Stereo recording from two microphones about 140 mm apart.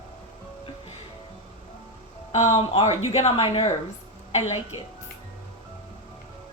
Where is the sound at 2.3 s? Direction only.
50° left (ahead or behind).